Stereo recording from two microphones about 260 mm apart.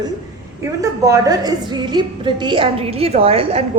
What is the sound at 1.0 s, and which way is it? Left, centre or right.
A woman's voice, centre.